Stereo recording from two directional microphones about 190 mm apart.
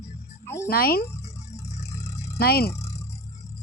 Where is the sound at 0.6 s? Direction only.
50° left (ahead or behind).